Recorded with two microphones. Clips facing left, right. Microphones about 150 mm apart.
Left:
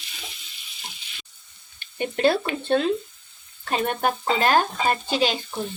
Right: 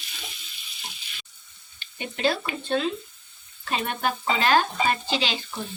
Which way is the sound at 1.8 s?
50° left (ahead or behind).